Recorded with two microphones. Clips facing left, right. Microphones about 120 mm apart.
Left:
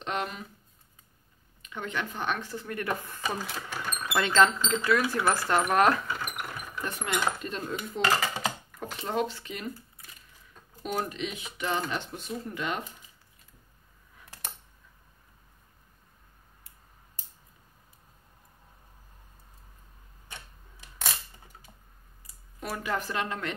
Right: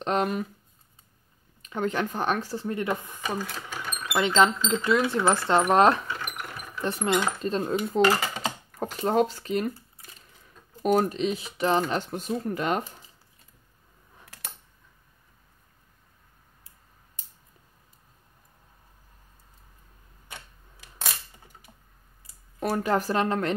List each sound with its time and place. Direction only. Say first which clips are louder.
0.0 s speech: right 7 dB; 40° right (ahead or behind)
1.6 s speech: right 7 dB; 40° right (ahead or behind); by 3.3 s 15° right (ahead or behind)
3.3 s speech: right 2 dB; 5° left (ahead or behind)
4.0 s speech: right 2 dB; 15° right (ahead or behind); by 8.8 s 30° right (ahead or behind)
8.9 s speech: right 7 dB; 45° right (ahead or behind)
22.7 s speech: right 7 dB; 35° right (ahead or behind)